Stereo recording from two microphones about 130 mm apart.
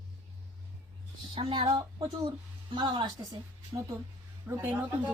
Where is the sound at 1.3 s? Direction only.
40° right (ahead or behind).